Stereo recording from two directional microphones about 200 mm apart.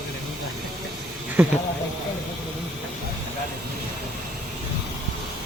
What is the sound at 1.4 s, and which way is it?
Speech, 5° right (ahead or behind).